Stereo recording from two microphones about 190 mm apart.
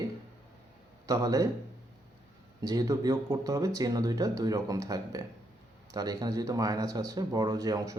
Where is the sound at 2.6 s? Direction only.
20° right (ahead or behind).